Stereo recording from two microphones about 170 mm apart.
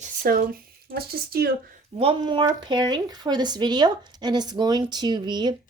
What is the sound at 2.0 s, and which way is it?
Speech, 30° right (ahead or behind).